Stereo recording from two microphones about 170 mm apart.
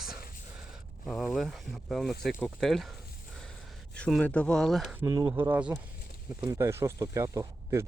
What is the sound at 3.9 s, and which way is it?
Speech, 5° left (ahead or behind).